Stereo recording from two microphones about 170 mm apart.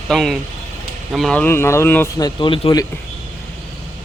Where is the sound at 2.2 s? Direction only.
30° left (ahead or behind).